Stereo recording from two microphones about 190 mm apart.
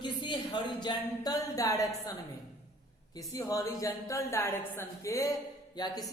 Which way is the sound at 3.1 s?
20° left (ahead or behind).